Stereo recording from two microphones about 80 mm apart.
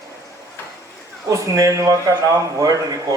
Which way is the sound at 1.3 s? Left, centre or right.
Right.